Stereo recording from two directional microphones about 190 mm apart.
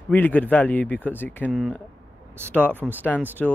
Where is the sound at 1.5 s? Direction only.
Centre (ahead or behind).